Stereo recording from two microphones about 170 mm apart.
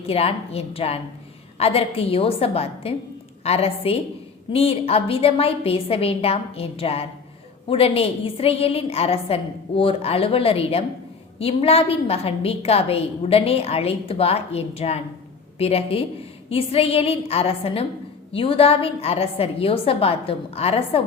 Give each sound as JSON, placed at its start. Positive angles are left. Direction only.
{"t": 0.0, "sound": "a woman's voice", "side_deg": 35}